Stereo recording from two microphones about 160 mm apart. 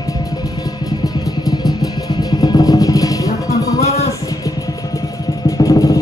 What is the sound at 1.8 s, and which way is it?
Music, 25° left (ahead or behind).